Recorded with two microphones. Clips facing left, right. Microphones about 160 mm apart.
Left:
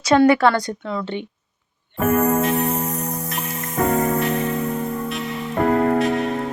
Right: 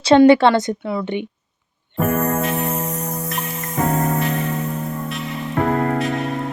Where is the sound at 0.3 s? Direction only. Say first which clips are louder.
Right 4 dB; 25° right (ahead or behind).